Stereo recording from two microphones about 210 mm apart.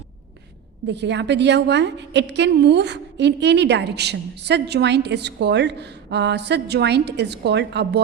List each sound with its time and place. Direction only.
0.9 s a woman's voice: 55° right (ahead or behind)